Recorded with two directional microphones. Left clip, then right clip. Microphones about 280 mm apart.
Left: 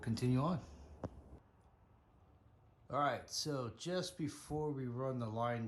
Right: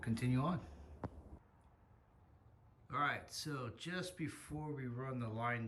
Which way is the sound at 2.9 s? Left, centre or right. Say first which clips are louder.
Left 2 dB; centre.